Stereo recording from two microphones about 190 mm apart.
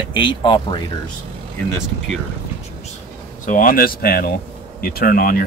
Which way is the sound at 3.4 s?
45° left (ahead or behind).